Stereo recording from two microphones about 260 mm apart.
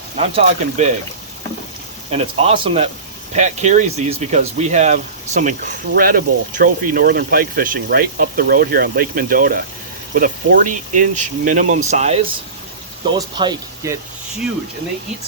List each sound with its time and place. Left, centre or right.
0.2 s speech: right
2.0 s speech: right